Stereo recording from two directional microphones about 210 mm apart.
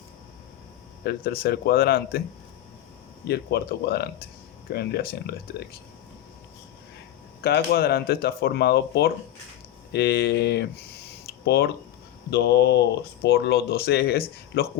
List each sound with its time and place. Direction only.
1.0 s speech: 45° left (ahead or behind)
3.2 s speech: 50° left (ahead or behind)
7.4 s speech: 50° left (ahead or behind)